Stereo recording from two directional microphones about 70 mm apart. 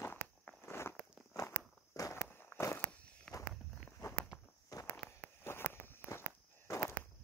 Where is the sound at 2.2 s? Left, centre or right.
Left.